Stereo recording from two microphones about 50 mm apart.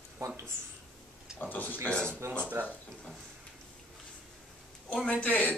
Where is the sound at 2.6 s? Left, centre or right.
Right.